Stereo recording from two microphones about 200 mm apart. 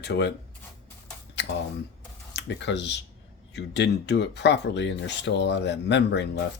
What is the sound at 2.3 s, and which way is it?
Speech, 60° left (ahead or behind).